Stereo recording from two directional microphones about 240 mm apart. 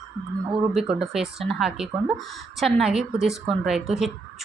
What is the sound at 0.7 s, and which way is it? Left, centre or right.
A woman's voice, centre.